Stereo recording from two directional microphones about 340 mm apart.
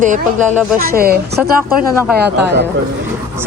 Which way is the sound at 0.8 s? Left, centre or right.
Right.